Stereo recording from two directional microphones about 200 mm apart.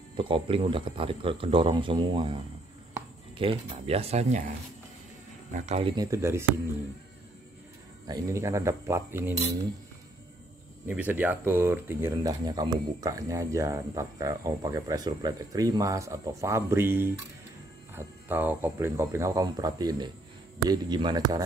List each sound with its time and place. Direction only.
0.1 s speech: 25° right (ahead or behind)
5.5 s speech: 35° right (ahead or behind)
6.0 s speech: 15° right (ahead or behind)
8.1 s speech: 15° right (ahead or behind)
10.9 s speech: 10° right (ahead or behind)